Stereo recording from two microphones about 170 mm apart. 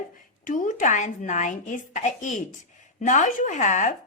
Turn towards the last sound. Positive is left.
turn(degrees=45)  # may be behind; listen again after turning